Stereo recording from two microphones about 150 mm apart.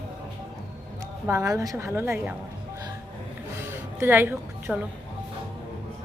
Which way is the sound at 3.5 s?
15° right (ahead or behind).